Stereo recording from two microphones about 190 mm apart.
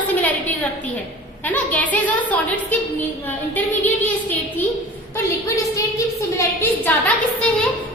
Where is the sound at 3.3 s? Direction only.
10° left (ahead or behind).